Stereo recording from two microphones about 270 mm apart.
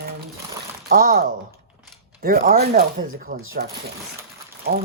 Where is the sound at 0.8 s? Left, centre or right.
Right.